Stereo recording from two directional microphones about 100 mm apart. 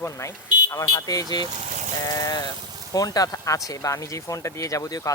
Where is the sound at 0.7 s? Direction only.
35° left (ahead or behind).